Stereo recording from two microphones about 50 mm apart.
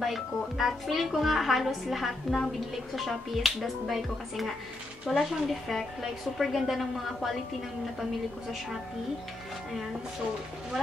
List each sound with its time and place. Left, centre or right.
0.0 s speech: centre